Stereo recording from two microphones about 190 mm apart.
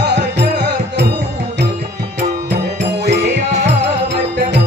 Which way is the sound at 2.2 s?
65° right (ahead or behind).